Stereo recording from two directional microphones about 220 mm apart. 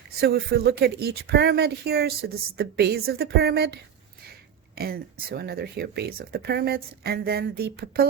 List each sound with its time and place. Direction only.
0.2 s speech: 45° right (ahead or behind)
4.7 s a sound: 45° right (ahead or behind)
5.3 s speech: 45° right (ahead or behind)